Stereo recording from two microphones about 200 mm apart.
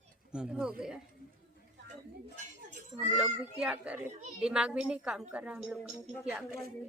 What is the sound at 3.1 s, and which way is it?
A woman's voice, 5° right (ahead or behind).